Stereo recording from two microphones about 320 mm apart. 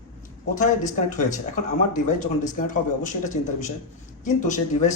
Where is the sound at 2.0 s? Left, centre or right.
Left.